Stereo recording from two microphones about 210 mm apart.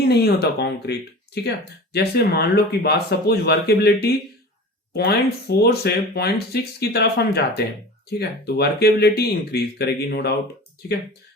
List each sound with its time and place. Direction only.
0.0 s speech: 50° left (ahead or behind)